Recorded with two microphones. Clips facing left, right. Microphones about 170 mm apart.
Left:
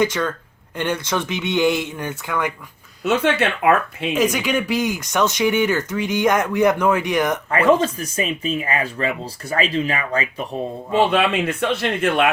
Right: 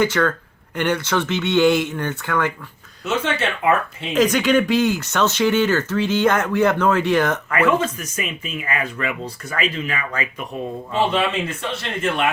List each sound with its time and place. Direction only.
0.0 s speech: 15° left (ahead or behind)
3.0 s speech: 60° left (ahead or behind)
4.1 s speech: 10° left (ahead or behind)
7.5 s speech: 35° left (ahead or behind)
11.1 s speech: 60° left (ahead or behind)